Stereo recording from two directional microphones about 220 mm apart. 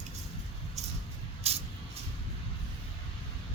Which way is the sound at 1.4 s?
30° right (ahead or behind).